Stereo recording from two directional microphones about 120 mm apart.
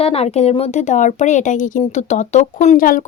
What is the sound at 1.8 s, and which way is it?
Speech, 70° left (ahead or behind).